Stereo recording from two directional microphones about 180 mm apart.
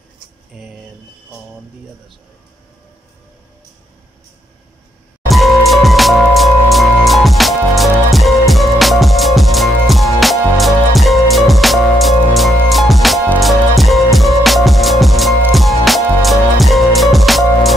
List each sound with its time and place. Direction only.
0.5 s speech: centre (ahead or behind)
5.3 s music: centre (ahead or behind)